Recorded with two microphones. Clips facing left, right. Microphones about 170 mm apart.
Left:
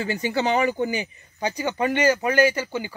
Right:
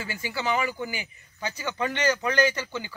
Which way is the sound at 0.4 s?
20° left (ahead or behind).